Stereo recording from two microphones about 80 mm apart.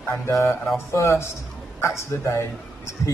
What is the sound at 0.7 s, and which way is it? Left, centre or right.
A woman's voice, left.